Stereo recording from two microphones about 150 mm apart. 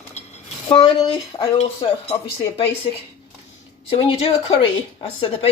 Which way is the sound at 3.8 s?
40° left (ahead or behind).